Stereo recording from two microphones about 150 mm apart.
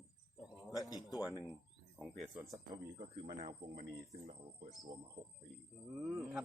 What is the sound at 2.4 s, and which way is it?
Speech, 25° right (ahead or behind).